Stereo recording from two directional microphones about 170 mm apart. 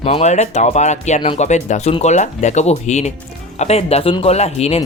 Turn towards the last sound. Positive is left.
turn(degrees=40)  # may be behind; listen again after turning